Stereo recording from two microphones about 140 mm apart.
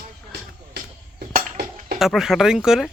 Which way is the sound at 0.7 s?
90° right.